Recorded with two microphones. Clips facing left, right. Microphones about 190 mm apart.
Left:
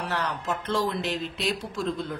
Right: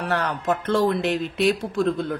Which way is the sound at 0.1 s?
55° right (ahead or behind).